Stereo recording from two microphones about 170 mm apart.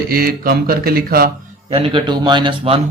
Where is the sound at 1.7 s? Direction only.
30° right (ahead or behind).